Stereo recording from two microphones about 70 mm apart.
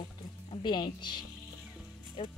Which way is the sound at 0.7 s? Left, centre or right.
Left.